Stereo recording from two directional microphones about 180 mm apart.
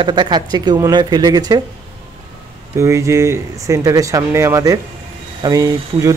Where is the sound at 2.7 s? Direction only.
15° right (ahead or behind).